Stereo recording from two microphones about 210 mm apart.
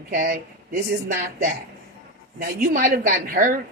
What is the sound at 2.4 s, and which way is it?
Speech, 40° right (ahead or behind).